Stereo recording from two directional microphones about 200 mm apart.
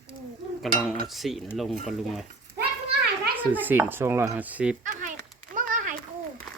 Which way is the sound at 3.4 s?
10° right (ahead or behind).